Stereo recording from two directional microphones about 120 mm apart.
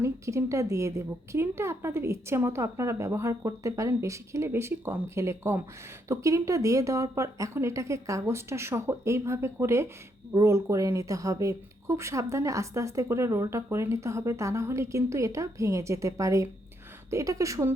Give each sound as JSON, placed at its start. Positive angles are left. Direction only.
{"t": 0.0, "sound": "speech", "side_deg": -25}